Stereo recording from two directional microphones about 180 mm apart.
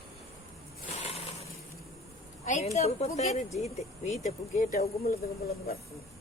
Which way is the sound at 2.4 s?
45° left (ahead or behind).